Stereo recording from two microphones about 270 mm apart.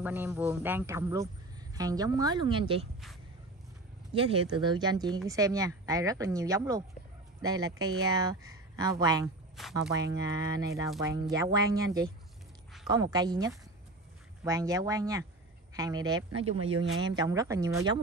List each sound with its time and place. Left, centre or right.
0.0 s a man's voice: centre
4.1 s a man's voice: centre
9.6 s speech: centre
10.1 s a man's voice: centre
16.7 s speech: right
17.0 s a man's voice: centre